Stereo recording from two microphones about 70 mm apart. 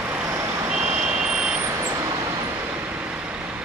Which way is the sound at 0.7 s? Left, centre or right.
Centre.